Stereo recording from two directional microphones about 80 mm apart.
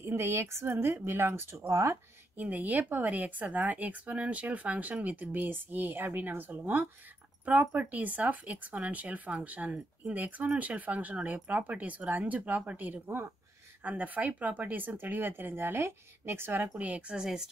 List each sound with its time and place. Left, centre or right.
0.0 s speech: right
2.4 s speech: right